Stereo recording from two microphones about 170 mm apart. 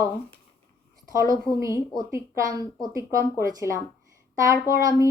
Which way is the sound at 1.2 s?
15° right (ahead or behind).